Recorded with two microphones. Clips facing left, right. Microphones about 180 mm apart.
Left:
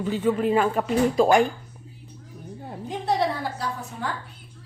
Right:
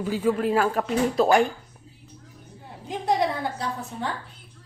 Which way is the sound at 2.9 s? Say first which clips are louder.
Even; 15° right (ahead or behind).